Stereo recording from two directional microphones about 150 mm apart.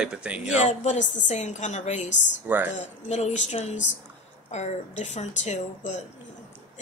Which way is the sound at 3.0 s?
50° left (ahead or behind).